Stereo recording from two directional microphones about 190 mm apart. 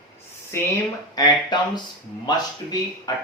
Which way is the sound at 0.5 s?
15° left (ahead or behind).